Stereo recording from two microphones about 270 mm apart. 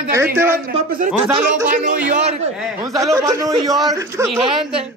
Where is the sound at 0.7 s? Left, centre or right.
Right.